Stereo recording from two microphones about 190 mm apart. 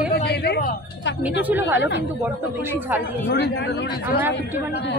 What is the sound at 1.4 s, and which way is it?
A woman's voice, 10° right (ahead or behind).